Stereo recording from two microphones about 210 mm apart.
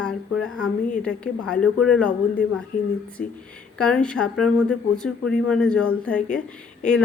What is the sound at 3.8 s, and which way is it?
Speech, 5° left (ahead or behind).